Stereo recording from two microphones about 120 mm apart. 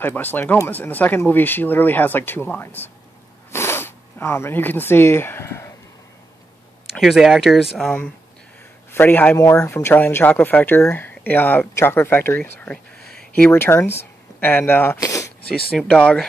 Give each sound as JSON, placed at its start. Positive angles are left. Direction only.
{"t": 0.0, "sound": "speech", "side_deg": 15}
{"t": 7.0, "sound": "speech", "side_deg": 0}
{"t": 8.9, "sound": "speech", "side_deg": 15}
{"t": 13.5, "sound": "speech", "side_deg": 20}
{"t": 15.0, "sound": "a sound", "side_deg": 25}
{"t": 15.9, "sound": "speech", "side_deg": 10}